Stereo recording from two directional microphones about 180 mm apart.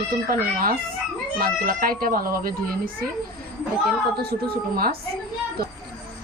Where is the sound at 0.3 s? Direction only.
55° right (ahead or behind).